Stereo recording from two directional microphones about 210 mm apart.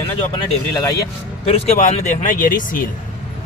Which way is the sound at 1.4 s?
35° left (ahead or behind).